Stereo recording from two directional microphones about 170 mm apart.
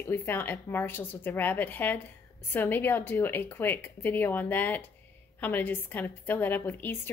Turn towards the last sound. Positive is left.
turn(degrees=10)  # may be behind; listen again after turning